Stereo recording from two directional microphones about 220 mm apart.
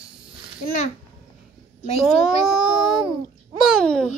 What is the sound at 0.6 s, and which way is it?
Speech, 35° left (ahead or behind).